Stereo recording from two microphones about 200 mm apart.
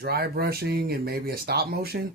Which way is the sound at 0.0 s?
50° right (ahead or behind).